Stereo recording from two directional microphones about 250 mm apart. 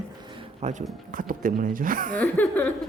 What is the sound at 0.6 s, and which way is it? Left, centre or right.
Speech, right.